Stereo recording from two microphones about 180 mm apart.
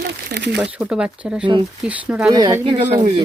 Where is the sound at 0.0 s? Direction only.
70° right (ahead or behind).